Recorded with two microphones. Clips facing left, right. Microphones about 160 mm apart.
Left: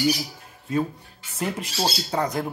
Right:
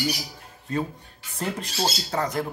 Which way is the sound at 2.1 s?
15° left (ahead or behind).